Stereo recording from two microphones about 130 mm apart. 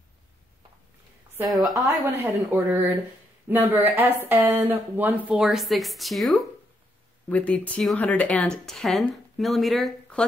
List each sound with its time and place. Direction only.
1.5 s speech: centre (ahead or behind)
2.2 s speech: 15° right (ahead or behind)
5.3 s speech: 5° right (ahead or behind)
7.2 s speech: 10° left (ahead or behind)